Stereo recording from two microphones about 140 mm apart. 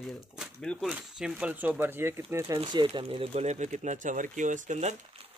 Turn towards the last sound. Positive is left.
turn(degrees=-55)  # may be behind; listen again after turning